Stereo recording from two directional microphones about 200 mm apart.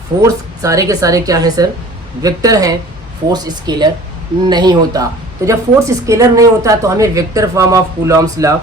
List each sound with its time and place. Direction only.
0.2 s a woman's voice: 15° right (ahead or behind)